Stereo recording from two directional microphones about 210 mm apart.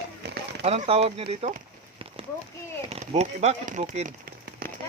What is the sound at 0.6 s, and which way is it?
Speech, 30° right (ahead or behind).